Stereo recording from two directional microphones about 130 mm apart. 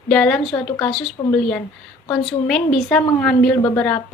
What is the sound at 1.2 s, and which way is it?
Speech, 25° left (ahead or behind).